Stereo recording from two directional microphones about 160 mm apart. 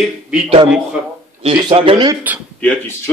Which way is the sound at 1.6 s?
30° right (ahead or behind).